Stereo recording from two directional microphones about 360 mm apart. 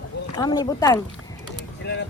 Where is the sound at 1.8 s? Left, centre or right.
Left.